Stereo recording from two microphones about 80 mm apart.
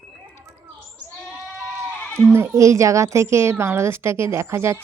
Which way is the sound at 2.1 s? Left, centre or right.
Right.